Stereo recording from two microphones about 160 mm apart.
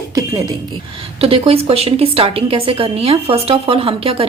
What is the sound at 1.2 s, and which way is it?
A woman's voice, 35° right (ahead or behind).